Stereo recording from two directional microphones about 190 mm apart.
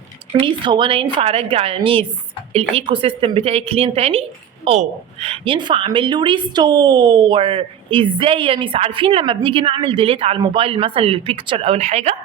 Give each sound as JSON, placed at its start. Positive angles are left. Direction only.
{"t": 0.3, "sound": "a woman's voice", "side_deg": -25}